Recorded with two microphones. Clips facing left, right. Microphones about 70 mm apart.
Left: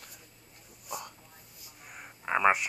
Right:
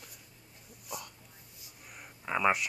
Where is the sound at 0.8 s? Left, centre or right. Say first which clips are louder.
Left 3 dB; left.